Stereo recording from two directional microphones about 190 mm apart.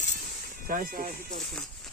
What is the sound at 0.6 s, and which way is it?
Music, 45° right (ahead or behind).